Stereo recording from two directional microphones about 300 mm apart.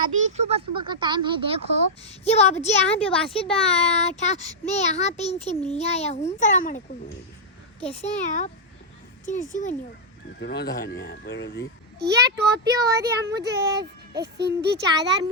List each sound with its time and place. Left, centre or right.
0.3 s speech: right
2.0 s a child's voice: left
9.5 s a child's voice: left
11.9 s a child's voice: right
12.7 s speech: centre
14.1 s a child's voice: right
15.0 s speech: centre